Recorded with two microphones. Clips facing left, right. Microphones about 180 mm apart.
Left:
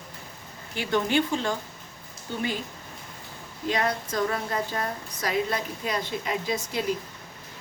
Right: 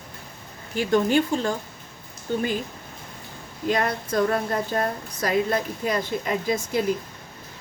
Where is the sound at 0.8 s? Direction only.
45° right (ahead or behind).